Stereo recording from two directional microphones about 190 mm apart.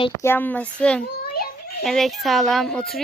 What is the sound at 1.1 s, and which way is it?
Children playing, 50° left (ahead or behind).